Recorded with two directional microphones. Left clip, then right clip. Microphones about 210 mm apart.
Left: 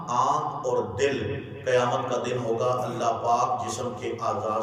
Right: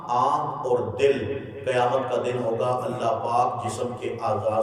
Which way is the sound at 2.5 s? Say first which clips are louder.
Right 1 dB; 10° right (ahead or behind).